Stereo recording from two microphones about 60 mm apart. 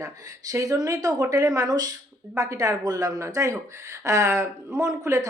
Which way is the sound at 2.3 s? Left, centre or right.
Right.